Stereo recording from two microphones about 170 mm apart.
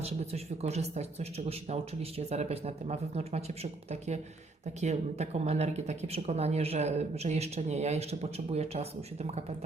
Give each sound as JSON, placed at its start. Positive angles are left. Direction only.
{"t": 0.0, "sound": "speech", "side_deg": -40}